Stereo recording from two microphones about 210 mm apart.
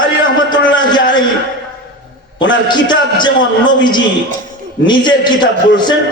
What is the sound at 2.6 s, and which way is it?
Speech, 20° left (ahead or behind).